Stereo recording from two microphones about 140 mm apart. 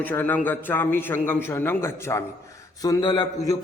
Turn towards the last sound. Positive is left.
turn(degrees=35)  # may be behind; listen again after turning